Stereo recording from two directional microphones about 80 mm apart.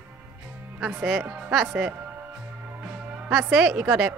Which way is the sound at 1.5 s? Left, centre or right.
Centre.